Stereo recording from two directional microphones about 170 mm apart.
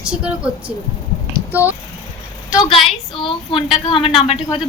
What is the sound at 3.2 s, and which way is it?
A woman's voice, 30° left (ahead or behind).